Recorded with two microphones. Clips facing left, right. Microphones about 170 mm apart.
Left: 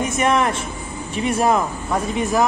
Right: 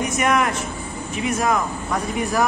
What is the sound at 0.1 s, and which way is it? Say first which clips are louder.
A woman's voice: left 2 dB; 25° left (ahead or behind).